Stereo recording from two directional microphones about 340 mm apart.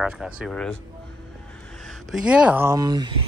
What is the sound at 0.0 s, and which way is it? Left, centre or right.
Speech, centre.